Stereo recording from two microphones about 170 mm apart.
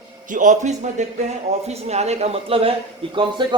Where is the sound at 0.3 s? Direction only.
50° right (ahead or behind).